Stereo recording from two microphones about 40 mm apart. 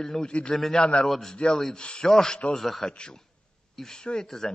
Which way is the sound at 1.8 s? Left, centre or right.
Left.